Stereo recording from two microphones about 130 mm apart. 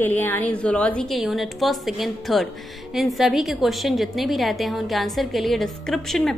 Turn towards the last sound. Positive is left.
turn(degrees=5)  # may be behind; listen again after turning